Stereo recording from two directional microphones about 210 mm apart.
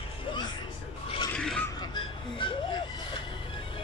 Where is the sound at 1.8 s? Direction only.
25° left (ahead or behind).